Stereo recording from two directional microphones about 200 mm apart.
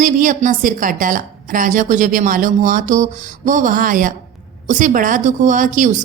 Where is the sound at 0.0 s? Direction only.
40° right (ahead or behind).